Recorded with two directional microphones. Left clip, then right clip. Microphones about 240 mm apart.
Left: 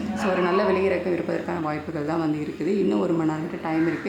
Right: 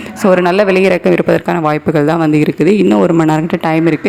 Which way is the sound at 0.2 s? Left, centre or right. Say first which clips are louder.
Right 13 dB; right.